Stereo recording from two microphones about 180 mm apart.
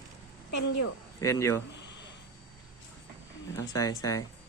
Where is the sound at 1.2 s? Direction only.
15° left (ahead or behind).